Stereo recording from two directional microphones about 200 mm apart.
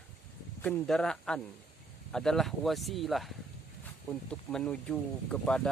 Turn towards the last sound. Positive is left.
turn(degrees=5)  # may be behind; listen again after turning